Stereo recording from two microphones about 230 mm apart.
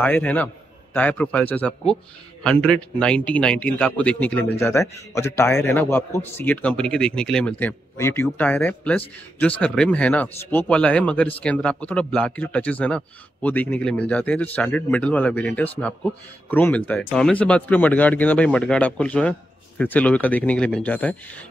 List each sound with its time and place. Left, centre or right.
0.0 s a man's voice: centre